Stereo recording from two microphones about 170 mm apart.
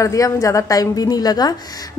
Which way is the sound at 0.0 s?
20° left (ahead or behind).